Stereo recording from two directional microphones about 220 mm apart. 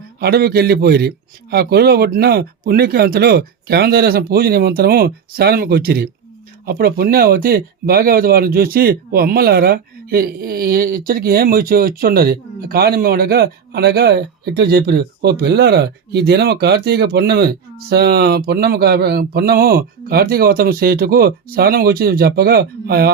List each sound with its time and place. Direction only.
0.2 s speech: 45° right (ahead or behind)